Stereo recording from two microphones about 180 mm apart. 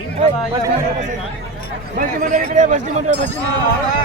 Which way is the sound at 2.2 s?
45° right (ahead or behind).